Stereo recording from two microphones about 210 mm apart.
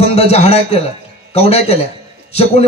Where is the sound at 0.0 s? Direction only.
30° left (ahead or behind).